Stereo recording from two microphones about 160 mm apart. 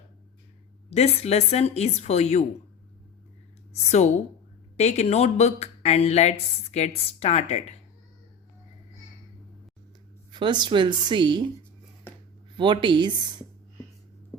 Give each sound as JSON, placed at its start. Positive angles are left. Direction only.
{"t": 0.9, "sound": "a woman's voice", "side_deg": 40}
{"t": 3.7, "sound": "speech", "side_deg": 45}
{"t": 10.3, "sound": "speech", "side_deg": -30}
{"t": 12.5, "sound": "speech", "side_deg": -30}